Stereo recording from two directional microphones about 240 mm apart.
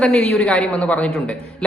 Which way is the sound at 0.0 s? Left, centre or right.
Centre.